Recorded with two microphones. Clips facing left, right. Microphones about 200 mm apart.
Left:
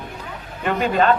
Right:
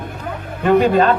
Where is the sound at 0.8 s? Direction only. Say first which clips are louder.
Right 3 dB; 35° right (ahead or behind).